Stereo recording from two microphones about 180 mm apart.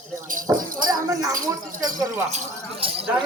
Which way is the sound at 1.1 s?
20° right (ahead or behind).